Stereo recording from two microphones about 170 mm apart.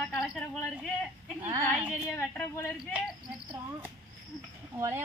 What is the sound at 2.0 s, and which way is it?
Speech, 15° left (ahead or behind).